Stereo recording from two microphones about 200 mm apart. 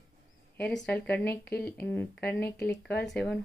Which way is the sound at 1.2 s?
55° left (ahead or behind).